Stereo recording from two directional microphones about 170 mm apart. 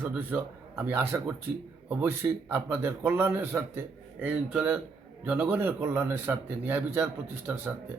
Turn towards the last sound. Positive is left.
turn(degrees=-10)  # may be behind; listen again after turning